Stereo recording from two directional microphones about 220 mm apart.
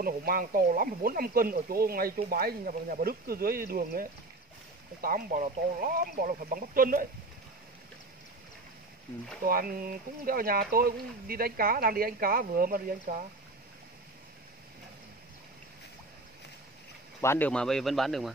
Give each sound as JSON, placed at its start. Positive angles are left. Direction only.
{"t": 0.0, "sound": "speech", "side_deg": -40}
{"t": 9.4, "sound": "speech", "side_deg": -40}
{"t": 17.2, "sound": "speech", "side_deg": 10}